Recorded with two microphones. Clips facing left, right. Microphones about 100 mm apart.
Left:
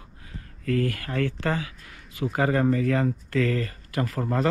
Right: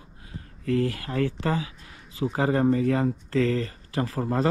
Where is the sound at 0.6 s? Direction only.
25° right (ahead or behind).